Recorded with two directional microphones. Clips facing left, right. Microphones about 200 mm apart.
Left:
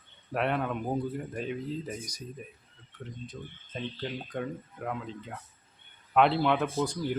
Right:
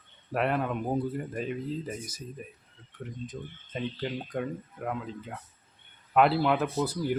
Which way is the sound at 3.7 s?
5° right (ahead or behind).